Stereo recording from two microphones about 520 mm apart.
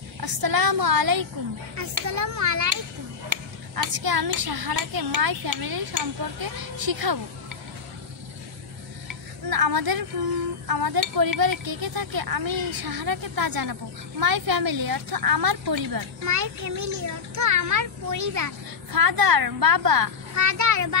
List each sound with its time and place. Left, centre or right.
0.2 s a woman's voice: right
9.0 s tick-tock: right
10.7 s a woman's voice: right